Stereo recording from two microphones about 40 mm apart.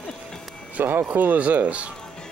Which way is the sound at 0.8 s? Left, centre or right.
Right.